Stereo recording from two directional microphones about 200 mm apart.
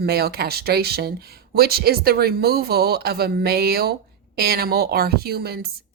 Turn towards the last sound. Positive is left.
turn(degrees=-50)  # may be behind; listen again after turning